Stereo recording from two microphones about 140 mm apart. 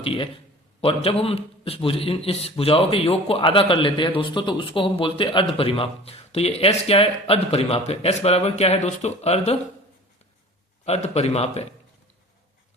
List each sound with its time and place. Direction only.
0.0 s a man's voice: 40° left (ahead or behind)
10.8 s a man's voice: 50° left (ahead or behind)